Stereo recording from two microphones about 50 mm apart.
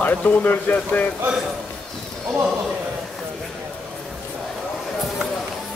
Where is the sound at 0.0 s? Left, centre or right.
Left.